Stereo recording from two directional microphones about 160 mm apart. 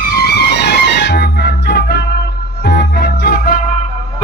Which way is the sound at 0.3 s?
90° left.